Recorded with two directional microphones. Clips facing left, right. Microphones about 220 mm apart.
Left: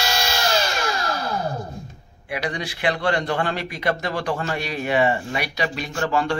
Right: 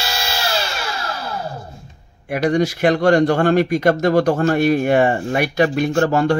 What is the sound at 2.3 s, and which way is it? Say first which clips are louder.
A man's voice: right 11 dB; 45° right (ahead or behind).